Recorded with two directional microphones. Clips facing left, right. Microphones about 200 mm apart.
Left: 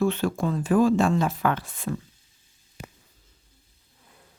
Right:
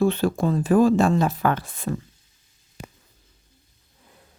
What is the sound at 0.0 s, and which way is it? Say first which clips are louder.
A woman's voice: right 3 dB; 35° right (ahead or behind).